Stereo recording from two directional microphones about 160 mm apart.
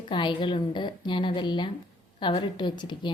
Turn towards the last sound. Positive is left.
turn(degrees=30)  # may be behind; listen again after turning